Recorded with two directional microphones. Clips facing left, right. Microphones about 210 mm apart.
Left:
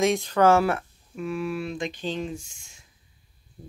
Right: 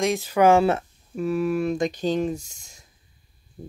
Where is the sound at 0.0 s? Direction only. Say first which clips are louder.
Right 1 dB; 5° right (ahead or behind); by 0.8 s 20° right (ahead or behind).